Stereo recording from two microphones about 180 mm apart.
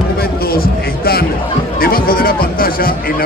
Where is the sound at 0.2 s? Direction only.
55° left (ahead or behind).